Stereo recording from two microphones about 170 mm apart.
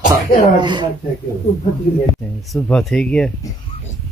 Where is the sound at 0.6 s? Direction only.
25° right (ahead or behind).